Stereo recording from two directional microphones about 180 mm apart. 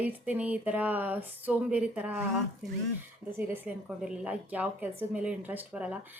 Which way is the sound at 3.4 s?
10° right (ahead or behind).